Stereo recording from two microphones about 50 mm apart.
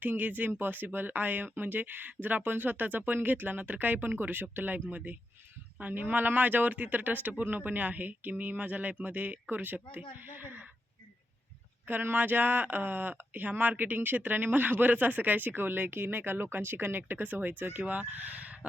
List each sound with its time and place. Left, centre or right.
0.0 s speech: right
11.9 s speech: right